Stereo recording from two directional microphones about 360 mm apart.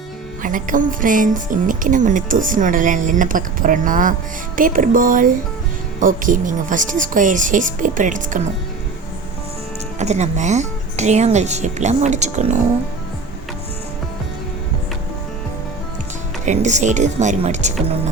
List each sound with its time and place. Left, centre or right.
0.4 s speech: right
10.0 s speech: centre
16.5 s speech: centre